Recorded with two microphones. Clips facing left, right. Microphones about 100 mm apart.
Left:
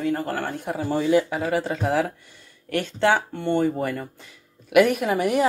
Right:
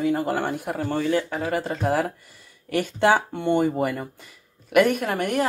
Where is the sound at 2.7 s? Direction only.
15° right (ahead or behind).